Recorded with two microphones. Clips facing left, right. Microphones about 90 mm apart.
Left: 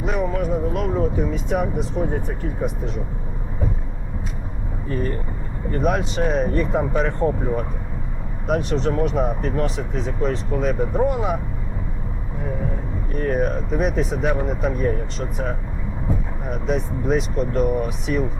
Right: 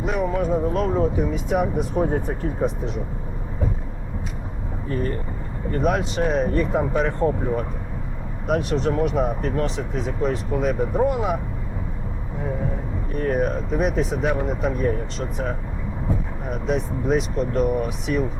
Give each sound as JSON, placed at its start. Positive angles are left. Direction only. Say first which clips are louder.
{"t": 0.0, "sound": "speech", "louder": "even", "side_deg": 0}
{"t": 0.3, "sound": "speech", "louder": "right 1 dB", "side_deg": -30}
{"t": 1.3, "sound": "speech", "louder": "right 1 dB", "side_deg": -10}
{"t": 2.0, "sound": "speech", "louder": "right 4 dB", "side_deg": -35}
{"t": 5.7, "sound": "speech", "louder": "even", "side_deg": 0}
{"t": 13.1, "sound": "speech", "louder": "even", "side_deg": 0}
{"t": 16.5, "sound": "speech", "louder": "even", "side_deg": 0}